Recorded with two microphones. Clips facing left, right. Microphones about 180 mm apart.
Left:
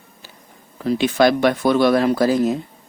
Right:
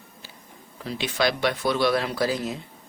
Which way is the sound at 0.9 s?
50° left (ahead or behind).